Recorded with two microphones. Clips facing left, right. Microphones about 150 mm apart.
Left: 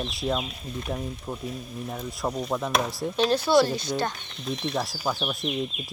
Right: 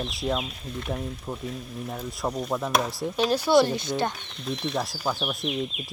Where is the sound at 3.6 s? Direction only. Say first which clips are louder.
Right 1 dB; 20° right (ahead or behind).